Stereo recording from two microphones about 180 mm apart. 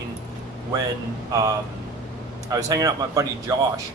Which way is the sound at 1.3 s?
20° right (ahead or behind).